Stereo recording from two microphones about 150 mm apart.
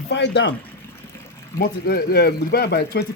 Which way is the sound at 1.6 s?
90° left.